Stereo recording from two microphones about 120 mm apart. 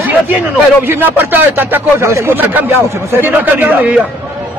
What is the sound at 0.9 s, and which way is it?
A man's voice, 15° right (ahead or behind).